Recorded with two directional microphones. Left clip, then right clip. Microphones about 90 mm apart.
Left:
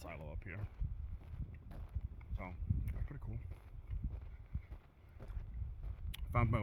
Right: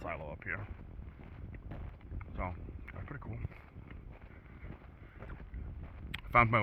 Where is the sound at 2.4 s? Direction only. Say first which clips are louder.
Right 7 dB; 40° left (ahead or behind).